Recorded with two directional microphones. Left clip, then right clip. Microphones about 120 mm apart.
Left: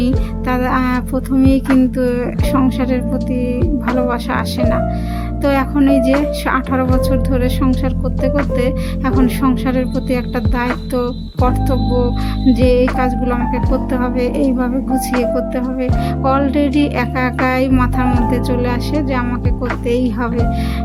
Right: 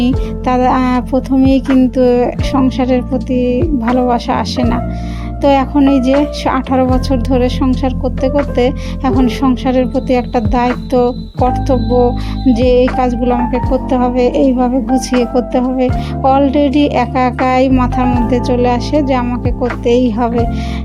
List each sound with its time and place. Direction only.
0.4 s speech: 30° right (ahead or behind)
1.6 s music: centre (ahead or behind)
2.0 s speech: 25° right (ahead or behind)